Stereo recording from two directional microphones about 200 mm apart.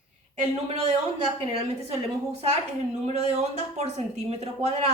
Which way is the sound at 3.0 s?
30° right (ahead or behind).